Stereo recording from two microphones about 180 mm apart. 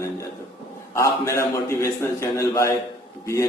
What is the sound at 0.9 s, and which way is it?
A man's voice, 15° left (ahead or behind).